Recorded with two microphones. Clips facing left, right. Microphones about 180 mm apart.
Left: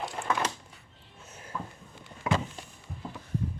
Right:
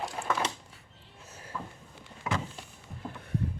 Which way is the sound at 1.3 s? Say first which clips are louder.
Left 1 dB; 30° right (ahead or behind).